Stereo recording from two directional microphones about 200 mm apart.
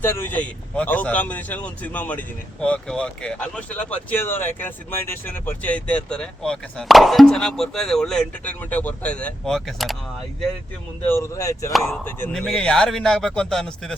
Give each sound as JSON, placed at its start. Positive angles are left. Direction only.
{"t": 0.0, "sound": "speech", "side_deg": 10}
{"t": 11.0, "sound": "a man's voice", "side_deg": 15}